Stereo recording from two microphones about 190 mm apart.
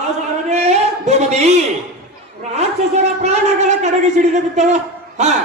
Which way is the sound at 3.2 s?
35° right (ahead or behind).